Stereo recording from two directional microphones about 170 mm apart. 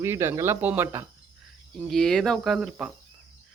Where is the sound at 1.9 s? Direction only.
Centre (ahead or behind).